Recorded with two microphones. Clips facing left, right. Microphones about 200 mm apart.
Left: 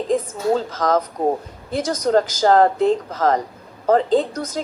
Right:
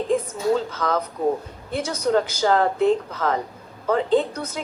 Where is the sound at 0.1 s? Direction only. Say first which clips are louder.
Left 2 dB; 40° left (ahead or behind).